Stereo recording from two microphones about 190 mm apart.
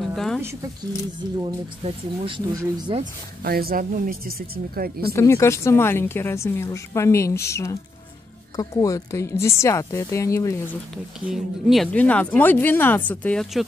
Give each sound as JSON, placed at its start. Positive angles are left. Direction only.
{"t": 0.0, "sound": "a sound", "side_deg": 0}
{"t": 2.2, "sound": "speech", "side_deg": -25}
{"t": 3.0, "sound": "speech", "side_deg": -50}
{"t": 5.1, "sound": "speech", "side_deg": 15}
{"t": 11.1, "sound": "speech", "side_deg": 0}